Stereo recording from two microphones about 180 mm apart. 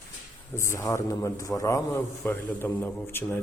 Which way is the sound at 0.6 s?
15° left (ahead or behind).